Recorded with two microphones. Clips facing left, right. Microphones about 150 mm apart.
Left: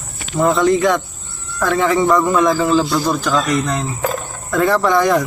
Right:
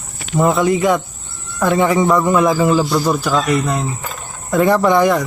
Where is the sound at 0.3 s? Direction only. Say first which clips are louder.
Even; 10° right (ahead or behind).